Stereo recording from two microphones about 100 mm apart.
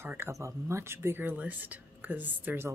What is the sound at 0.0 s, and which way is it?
Speech, 25° right (ahead or behind).